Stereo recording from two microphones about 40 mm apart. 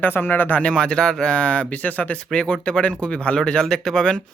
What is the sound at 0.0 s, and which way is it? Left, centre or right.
Speech, left.